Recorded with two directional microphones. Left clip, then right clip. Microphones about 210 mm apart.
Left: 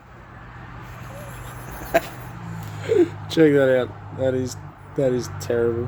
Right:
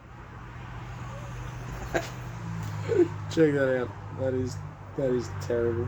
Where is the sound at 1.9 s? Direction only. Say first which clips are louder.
Left 10 dB; 45° left (ahead or behind).